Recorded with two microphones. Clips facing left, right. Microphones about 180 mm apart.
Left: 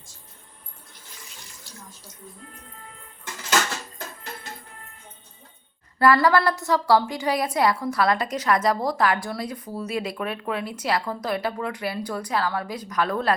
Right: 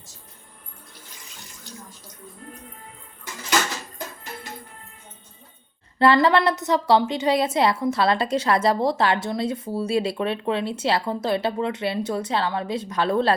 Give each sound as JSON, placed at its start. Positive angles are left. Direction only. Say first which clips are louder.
{"t": 6.0, "sound": "a woman's voice", "louder": "right 1 dB", "side_deg": -25}